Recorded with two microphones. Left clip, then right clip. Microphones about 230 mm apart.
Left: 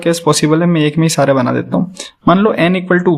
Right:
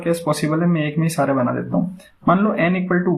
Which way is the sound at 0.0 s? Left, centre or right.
Left.